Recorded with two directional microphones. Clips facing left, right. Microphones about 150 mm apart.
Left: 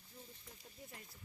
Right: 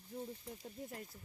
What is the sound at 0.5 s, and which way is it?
Speech, 50° right (ahead or behind).